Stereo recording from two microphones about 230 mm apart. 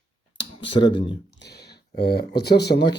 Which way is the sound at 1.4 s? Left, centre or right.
Left.